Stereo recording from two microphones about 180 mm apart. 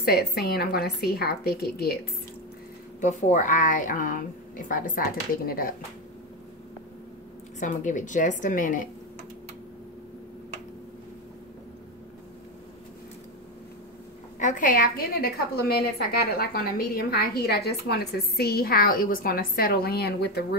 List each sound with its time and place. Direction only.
0.0 s a woman's voice: 60° left (ahead or behind)
3.0 s a woman's voice: 40° left (ahead or behind)
7.6 s a woman's voice: 45° left (ahead or behind)
14.4 s a woman's voice: 45° left (ahead or behind); by 20.4 s 60° left (ahead or behind)